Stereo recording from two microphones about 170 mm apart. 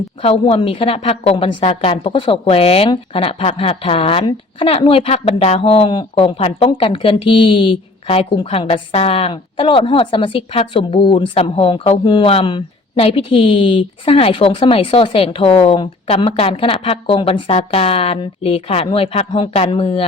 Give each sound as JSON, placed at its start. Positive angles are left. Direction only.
{"t": 0.2, "sound": "a woman's voice", "side_deg": 35}